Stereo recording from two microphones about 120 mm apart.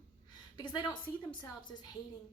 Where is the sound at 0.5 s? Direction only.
40° left (ahead or behind).